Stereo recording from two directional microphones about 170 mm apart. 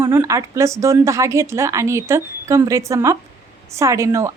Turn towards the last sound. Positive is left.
turn(degrees=-15)  # may be behind; listen again after turning